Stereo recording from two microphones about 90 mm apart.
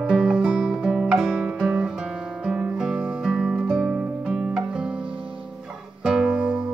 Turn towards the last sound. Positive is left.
turn(degrees=-15)  # may be behind; listen again after turning